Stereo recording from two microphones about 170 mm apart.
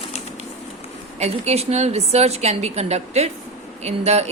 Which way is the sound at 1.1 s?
40° right (ahead or behind).